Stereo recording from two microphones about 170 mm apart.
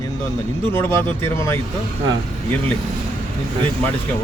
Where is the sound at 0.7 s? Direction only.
15° left (ahead or behind).